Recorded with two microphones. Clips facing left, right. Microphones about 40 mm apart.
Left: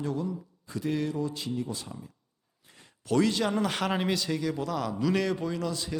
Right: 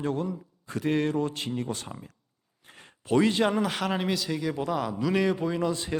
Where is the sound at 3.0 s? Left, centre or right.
Right.